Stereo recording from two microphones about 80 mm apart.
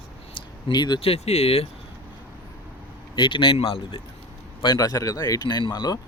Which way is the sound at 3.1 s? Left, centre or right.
Left.